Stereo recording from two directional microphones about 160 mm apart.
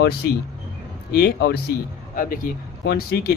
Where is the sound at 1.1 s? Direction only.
90° left.